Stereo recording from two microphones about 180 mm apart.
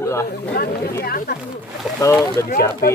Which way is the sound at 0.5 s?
60° left (ahead or behind).